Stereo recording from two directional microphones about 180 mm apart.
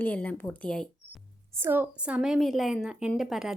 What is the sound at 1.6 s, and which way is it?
A woman's voice, 10° right (ahead or behind).